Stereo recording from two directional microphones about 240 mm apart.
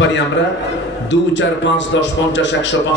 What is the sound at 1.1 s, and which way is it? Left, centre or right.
A man's voice, left.